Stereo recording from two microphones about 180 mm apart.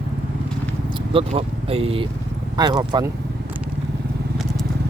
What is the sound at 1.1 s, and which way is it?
Speech, 35° right (ahead or behind).